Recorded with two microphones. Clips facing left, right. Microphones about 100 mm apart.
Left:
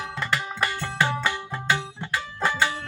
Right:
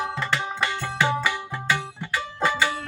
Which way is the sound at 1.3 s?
15° left (ahead or behind).